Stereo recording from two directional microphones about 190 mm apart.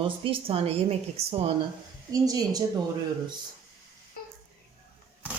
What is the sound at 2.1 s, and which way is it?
Speech, 20° right (ahead or behind).